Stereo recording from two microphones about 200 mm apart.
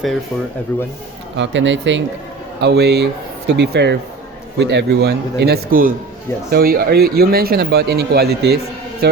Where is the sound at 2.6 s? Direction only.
55° right (ahead or behind).